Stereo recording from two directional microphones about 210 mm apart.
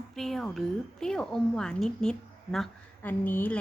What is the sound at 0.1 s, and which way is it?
A woman's voice, centre (ahead or behind).